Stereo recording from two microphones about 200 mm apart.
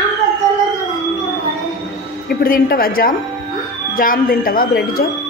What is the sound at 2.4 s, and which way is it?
Speech, 45° left (ahead or behind).